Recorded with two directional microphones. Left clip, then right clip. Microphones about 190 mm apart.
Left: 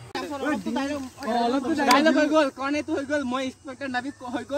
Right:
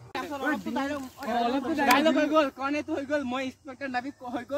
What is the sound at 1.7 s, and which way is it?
Speech, 10° right (ahead or behind).